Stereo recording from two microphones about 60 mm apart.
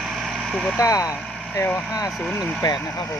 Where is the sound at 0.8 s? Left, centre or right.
Left.